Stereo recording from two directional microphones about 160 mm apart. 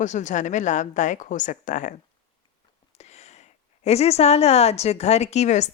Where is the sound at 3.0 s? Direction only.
45° left (ahead or behind).